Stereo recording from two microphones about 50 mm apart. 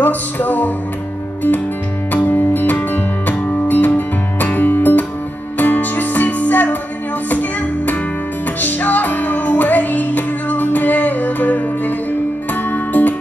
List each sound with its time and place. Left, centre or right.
0.0 s music: left
2.1 s music: left